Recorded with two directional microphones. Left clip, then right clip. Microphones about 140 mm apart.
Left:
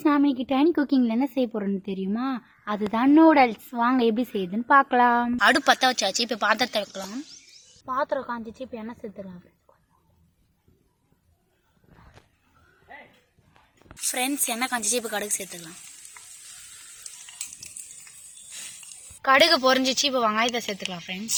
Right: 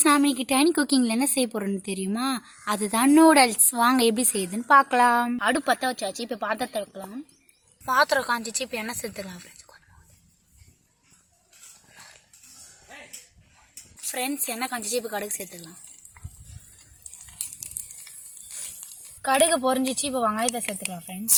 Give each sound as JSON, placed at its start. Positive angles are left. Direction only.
{"t": 0.0, "sound": "a woman's voice", "side_deg": -10}
{"t": 7.9, "sound": "a woman's voice", "side_deg": -10}
{"t": 14.0, "sound": "a woman's voice", "side_deg": 0}
{"t": 19.2, "sound": "a woman's voice", "side_deg": 0}